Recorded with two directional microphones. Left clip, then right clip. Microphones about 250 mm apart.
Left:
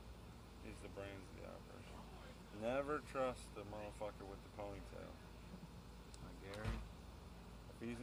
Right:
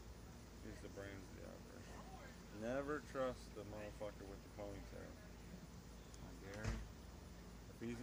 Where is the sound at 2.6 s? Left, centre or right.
Centre.